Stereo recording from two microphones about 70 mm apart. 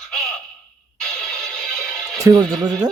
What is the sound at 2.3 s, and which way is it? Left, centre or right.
Speech, right.